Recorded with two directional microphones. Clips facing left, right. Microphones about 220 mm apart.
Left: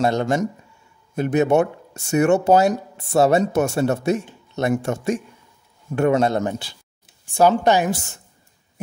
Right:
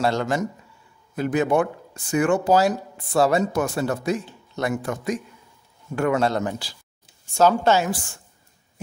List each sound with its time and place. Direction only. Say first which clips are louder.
0.0 s speech: left 3 dB; 20° left (ahead or behind)